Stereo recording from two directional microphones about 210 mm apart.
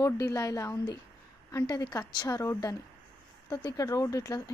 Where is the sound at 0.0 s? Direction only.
15° left (ahead or behind).